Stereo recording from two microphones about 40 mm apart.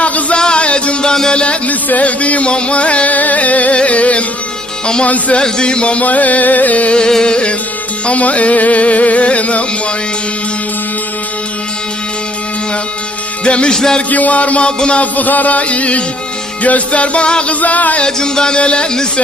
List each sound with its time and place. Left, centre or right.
0.3 s music: left
1.6 s music: left
3.8 s carnatic music: left
5.4 s a sound: left
6.1 s carnatic music: left
7.0 s a sound: centre
8.0 s carnatic music: left
13.4 s a sound: left
13.7 s music: centre
14.1 s carnatic music: left
17.5 s carnatic music: left
18.0 s a sound: centre